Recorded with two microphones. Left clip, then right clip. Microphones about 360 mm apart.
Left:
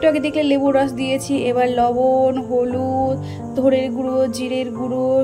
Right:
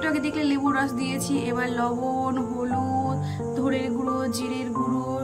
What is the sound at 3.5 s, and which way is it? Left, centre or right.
A woman's voice, centre.